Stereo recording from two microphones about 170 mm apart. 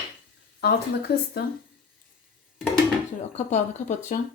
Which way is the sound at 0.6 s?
70° left (ahead or behind).